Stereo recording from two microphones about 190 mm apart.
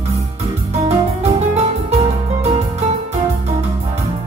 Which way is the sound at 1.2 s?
35° right (ahead or behind).